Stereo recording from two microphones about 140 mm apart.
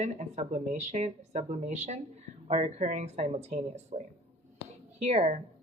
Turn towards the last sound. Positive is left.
turn(degrees=-50)  # may be behind; listen again after turning